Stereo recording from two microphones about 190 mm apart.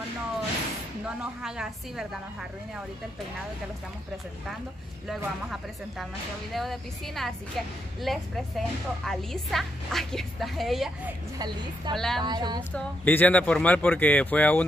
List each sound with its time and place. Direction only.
1.0 s a woman's voice: 5° right (ahead or behind)
5.0 s a woman's voice: centre (ahead or behind)
11.3 s a woman's voice: 20° right (ahead or behind)
11.9 s a woman's voice: centre (ahead or behind)
12.2 s a woman's voice: 20° right (ahead or behind)
12.7 s speech: 10° left (ahead or behind)